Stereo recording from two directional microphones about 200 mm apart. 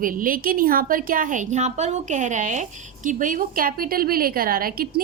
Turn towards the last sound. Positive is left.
turn(degrees=-45)  # may be behind; listen again after turning